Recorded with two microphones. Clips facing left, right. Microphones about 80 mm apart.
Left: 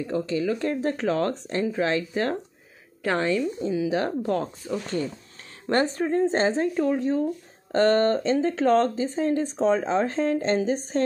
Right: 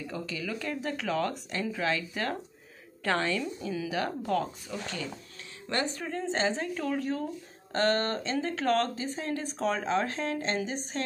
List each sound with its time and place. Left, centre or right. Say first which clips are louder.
0.0 s speech: left 10 dB; left
5.7 s speech: left 9 dB; left
6.7 s speech: left 7 dB; left
7.7 s speech: left 8 dB; left